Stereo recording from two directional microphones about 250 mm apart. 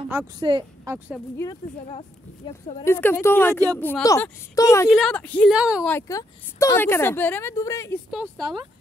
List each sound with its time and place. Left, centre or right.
0.4 s a woman's voice: centre
1.4 s speech: centre
2.8 s speech: centre
4.8 s a woman's voice: centre
5.9 s speech: centre